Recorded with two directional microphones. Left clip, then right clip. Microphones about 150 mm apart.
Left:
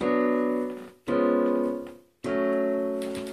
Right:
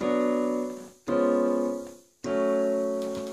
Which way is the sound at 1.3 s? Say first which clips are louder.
Even; 10° right (ahead or behind).